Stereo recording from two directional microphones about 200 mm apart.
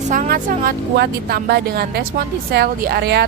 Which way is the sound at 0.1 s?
40° right (ahead or behind).